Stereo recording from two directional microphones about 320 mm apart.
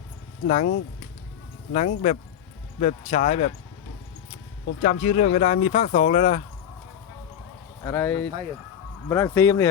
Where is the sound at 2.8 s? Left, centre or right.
Left.